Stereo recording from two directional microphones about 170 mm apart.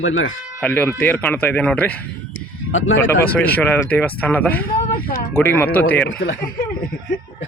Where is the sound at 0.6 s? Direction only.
10° left (ahead or behind).